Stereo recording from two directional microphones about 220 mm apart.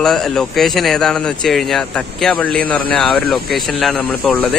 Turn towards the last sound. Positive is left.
turn(degrees=5)  # may be behind; listen again after turning